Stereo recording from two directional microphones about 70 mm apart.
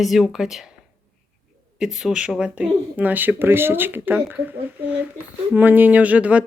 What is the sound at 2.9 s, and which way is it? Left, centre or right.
Speech, right.